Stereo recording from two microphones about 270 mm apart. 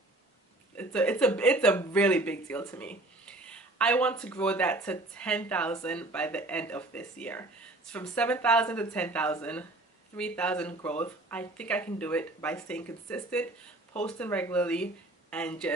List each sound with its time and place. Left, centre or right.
0.7 s speech: centre